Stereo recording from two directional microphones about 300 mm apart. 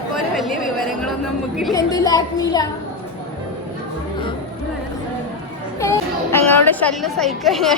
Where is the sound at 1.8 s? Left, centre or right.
Centre.